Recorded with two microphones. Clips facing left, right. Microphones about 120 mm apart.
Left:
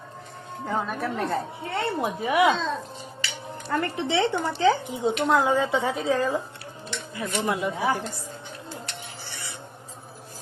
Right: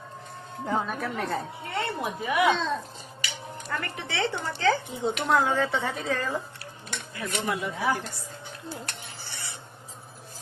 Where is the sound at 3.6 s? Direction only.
30° left (ahead or behind).